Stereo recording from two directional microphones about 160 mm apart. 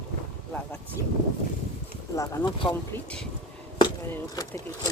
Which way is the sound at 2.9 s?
5° left (ahead or behind).